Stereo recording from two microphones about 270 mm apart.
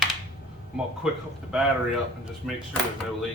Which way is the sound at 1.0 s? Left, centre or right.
Centre.